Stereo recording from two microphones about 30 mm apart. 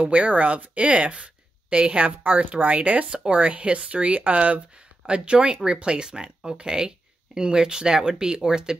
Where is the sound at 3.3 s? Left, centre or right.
Right.